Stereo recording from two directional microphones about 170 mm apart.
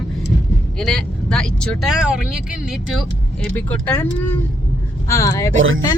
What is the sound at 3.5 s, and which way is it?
Speech, 10° left (ahead or behind).